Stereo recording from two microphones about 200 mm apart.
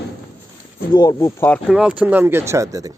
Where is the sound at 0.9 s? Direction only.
20° left (ahead or behind).